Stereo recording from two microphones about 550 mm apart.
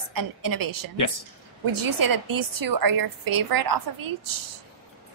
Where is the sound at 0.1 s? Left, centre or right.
Right.